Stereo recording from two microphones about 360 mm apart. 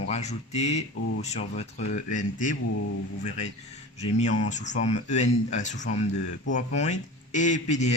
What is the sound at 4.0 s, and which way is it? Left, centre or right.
Speech, centre.